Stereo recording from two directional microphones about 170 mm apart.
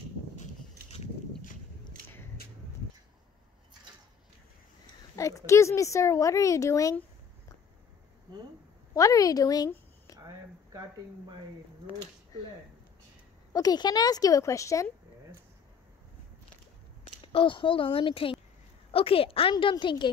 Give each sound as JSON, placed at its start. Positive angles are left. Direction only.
{"t": 5.1, "sound": "a woman's voice", "side_deg": 20}
{"t": 8.9, "sound": "a woman's voice", "side_deg": 20}
{"t": 10.1, "sound": "a sound", "side_deg": -20}
{"t": 13.5, "sound": "a woman's voice", "side_deg": 20}
{"t": 17.2, "sound": "a woman's voice", "side_deg": 30}